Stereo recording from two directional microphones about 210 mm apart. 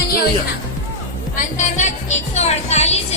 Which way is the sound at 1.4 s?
35° left (ahead or behind).